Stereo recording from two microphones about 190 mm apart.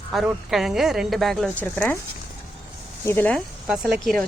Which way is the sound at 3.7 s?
5° right (ahead or behind).